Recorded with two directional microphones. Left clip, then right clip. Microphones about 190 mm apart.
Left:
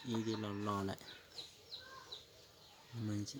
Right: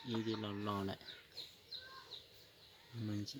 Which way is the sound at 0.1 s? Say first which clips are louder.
Left 1 dB; centre (ahead or behind).